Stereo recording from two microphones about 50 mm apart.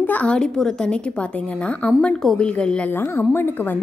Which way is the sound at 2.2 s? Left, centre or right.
Centre.